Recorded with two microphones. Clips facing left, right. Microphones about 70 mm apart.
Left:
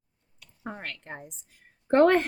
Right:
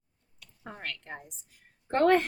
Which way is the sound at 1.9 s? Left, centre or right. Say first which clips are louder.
Left 5 dB; left.